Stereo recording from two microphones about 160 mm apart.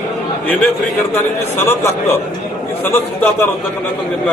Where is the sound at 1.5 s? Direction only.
15° left (ahead or behind).